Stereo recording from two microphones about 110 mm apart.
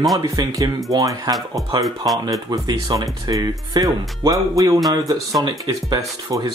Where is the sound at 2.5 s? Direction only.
40° right (ahead or behind).